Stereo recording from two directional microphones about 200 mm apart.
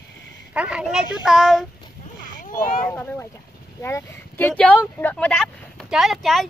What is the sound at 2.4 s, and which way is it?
Speech, 45° left (ahead or behind).